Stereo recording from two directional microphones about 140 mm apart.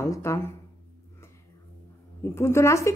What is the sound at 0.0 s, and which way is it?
Speech, 20° left (ahead or behind).